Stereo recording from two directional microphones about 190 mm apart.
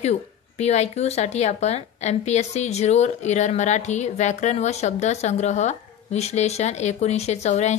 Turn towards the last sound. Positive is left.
turn(degrees=35)  # may be behind; listen again after turning